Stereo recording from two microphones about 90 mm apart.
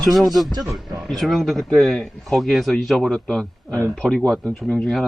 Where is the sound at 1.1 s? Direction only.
Centre (ahead or behind).